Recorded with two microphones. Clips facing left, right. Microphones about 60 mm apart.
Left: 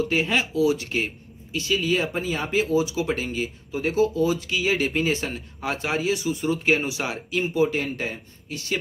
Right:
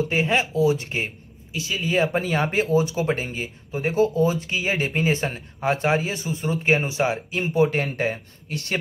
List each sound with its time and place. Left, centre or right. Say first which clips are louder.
0.1 s speech: right 1 dB; right
1.5 s speech: left 3 dB; centre
2.1 s speech: right 2 dB; right
7.5 s speech: right 4 dB; right